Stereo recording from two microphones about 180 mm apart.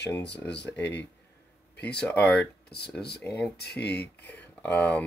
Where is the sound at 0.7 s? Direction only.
10° left (ahead or behind).